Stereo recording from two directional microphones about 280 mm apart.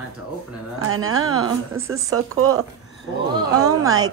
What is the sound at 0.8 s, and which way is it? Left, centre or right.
Speech, right.